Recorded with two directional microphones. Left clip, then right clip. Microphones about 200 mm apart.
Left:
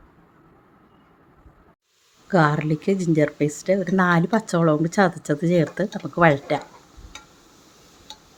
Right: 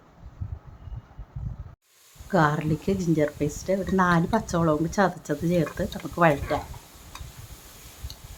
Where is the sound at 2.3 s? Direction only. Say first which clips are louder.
Left 3 dB; 15° left (ahead or behind).